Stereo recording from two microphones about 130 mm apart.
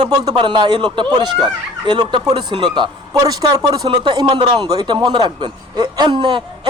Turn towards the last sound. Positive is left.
turn(degrees=-40)  # may be behind; listen again after turning